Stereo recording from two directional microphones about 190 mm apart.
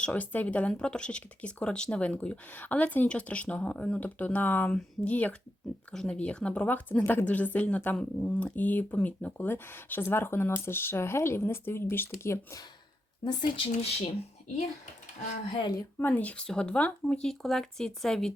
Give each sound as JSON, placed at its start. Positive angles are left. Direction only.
{"t": 0.0, "sound": "a woman's voice", "side_deg": 10}
{"t": 13.6, "sound": "speech", "side_deg": 30}
{"t": 15.5, "sound": "speech", "side_deg": 25}
{"t": 16.0, "sound": "speech", "side_deg": 10}